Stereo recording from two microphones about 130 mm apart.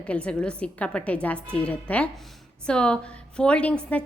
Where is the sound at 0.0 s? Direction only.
10° left (ahead or behind).